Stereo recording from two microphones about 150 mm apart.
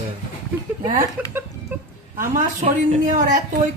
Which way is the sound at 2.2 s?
50° right (ahead or behind).